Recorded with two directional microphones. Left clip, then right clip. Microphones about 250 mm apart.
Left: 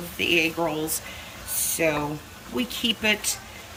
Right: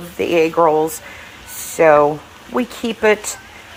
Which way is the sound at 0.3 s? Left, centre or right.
Centre.